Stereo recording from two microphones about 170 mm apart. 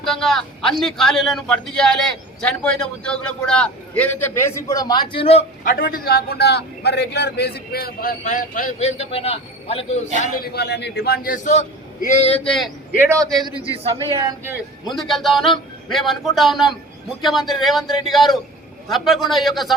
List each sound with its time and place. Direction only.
0.0 s a man's voice: centre (ahead or behind); by 5.5 s 35° left (ahead or behind)
5.6 s a man's voice: 55° left (ahead or behind)
8.2 s a man's voice: 50° left (ahead or behind)
10.2 s a man's voice: 60° left (ahead or behind)
12.5 s a man's voice: centre (ahead or behind)
13.0 s a man's voice: 15° right (ahead or behind)
13.3 s a man's voice: 30° right (ahead or behind)
14.9 s a man's voice: centre (ahead or behind)